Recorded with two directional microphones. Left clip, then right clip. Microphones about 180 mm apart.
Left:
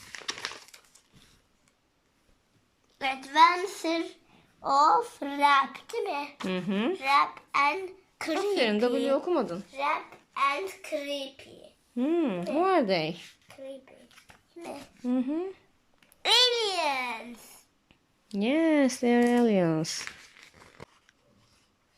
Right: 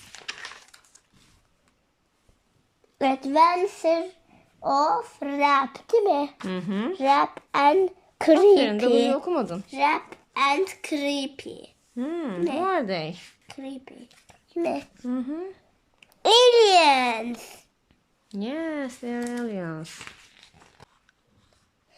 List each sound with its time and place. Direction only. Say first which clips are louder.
3.0 s a child's voice: right 2 dB; 35° right (ahead or behind); by 5.5 s 5° right (ahead or behind)
5.9 s speech: right 11 dB; 35° right (ahead or behind)
6.4 s speech: even; centre (ahead or behind)
6.9 s a woman's voice: right 4 dB; 35° right (ahead or behind)
8.5 s speech: right 6 dB; 5° left (ahead or behind)
9.7 s a child's voice: right 7 dB; 65° right (ahead or behind)
11.9 s speech: left 1 dB; 5° left (ahead or behind)
13.5 s a sound: right 7 dB; 65° right (ahead or behind)
13.9 s a child's voice: right 5 dB; 65° right (ahead or behind)
15.0 s speech: left 5 dB; 5° left (ahead or behind)
16.2 s a child's voice: right 8 dB; 40° right (ahead or behind); by 17.6 s 60° right (ahead or behind)
17.8 s speech: left 2 dB; 10° left (ahead or behind)